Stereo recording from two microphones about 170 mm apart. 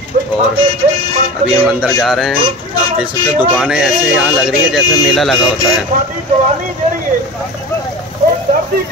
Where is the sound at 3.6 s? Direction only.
5° right (ahead or behind).